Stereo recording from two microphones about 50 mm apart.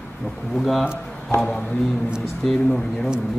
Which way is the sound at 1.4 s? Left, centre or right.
Centre.